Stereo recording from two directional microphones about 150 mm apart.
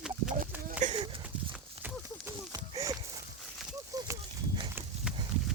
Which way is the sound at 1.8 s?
20° right (ahead or behind).